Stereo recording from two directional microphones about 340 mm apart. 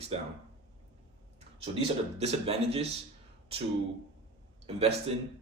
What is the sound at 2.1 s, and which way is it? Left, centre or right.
Speech, centre.